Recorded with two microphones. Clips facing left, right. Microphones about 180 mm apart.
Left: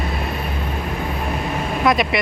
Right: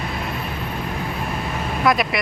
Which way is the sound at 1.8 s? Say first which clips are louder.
Left 1 dB; centre (ahead or behind).